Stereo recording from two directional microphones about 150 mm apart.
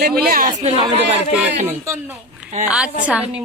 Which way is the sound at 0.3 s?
70° right (ahead or behind).